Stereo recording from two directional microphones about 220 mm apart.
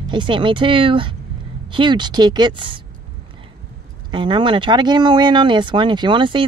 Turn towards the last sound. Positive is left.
turn(degrees=-20)  # may be behind; listen again after turning